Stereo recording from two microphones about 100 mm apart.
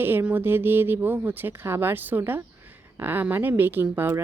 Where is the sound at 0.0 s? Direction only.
20° right (ahead or behind).